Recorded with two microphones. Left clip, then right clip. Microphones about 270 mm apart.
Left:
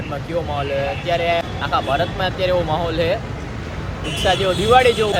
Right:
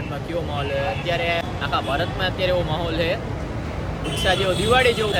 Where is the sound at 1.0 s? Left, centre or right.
Centre.